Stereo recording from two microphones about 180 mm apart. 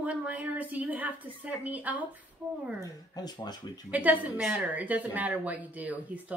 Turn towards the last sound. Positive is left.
turn(degrees=-10)  # may be behind; listen again after turning